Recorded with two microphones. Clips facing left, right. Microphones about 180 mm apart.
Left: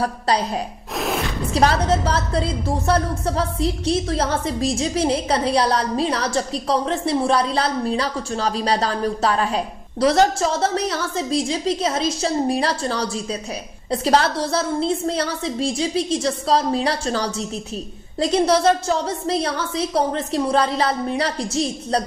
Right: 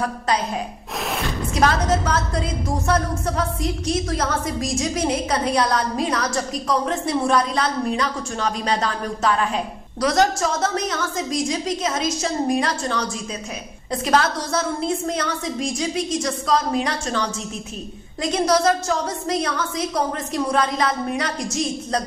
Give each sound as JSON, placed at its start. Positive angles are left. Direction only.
{"t": 0.0, "sound": "a woman's voice", "side_deg": 35}
{"t": 0.9, "sound": "gasp", "side_deg": 0}
{"t": 1.5, "sound": "a woman's voice", "side_deg": 30}